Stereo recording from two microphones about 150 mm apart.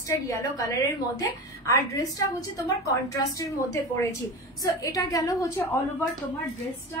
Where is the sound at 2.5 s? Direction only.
20° left (ahead or behind).